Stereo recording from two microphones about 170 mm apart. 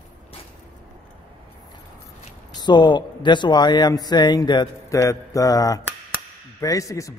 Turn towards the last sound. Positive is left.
turn(degrees=20)  # may be behind; listen again after turning